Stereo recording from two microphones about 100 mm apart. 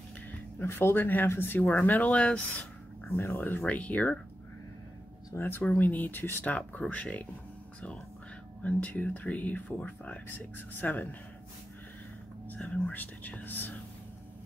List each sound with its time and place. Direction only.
0.6 s speech: 25° left (ahead or behind)
5.3 s speech: 20° left (ahead or behind)
8.6 s speech: 15° left (ahead or behind)
12.4 s speech: 15° left (ahead or behind)